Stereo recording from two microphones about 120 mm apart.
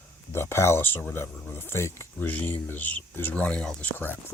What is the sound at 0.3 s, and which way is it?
Speech, 20° left (ahead or behind).